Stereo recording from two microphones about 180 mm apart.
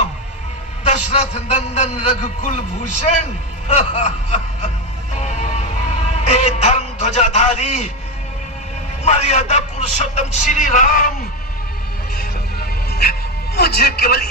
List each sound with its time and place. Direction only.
0.9 s a man's voice: 40° left (ahead or behind)
5.1 s music: 40° left (ahead or behind)
6.1 s a man's voice: 40° left (ahead or behind)
9.0 s a man's voice: 40° left (ahead or behind)
12.5 s music: 60° left (ahead or behind)
13.6 s a man's voice: 60° left (ahead or behind)